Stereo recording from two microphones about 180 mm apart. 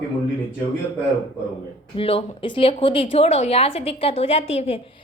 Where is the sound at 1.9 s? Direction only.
30° left (ahead or behind).